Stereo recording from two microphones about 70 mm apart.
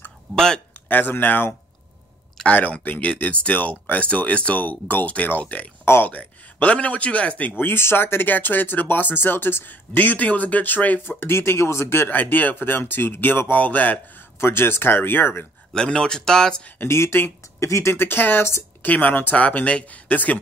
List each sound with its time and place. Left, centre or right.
0.8 s a man's voice: left
14.4 s speech: left
15.7 s speech: centre
16.8 s speech: left
18.9 s a man's voice: left